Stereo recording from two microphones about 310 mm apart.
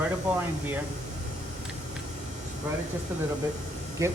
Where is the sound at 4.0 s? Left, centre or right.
Centre.